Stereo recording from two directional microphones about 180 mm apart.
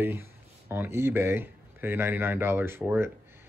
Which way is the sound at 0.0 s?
10° right (ahead or behind).